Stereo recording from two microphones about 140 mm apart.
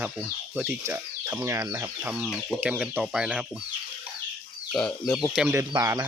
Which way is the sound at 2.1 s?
5° right (ahead or behind).